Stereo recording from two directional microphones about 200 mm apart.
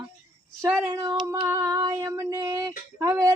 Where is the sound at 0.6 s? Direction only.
15° right (ahead or behind).